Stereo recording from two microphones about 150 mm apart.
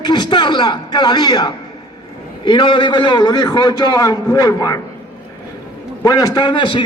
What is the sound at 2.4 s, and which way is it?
A man's voice, 30° left (ahead or behind).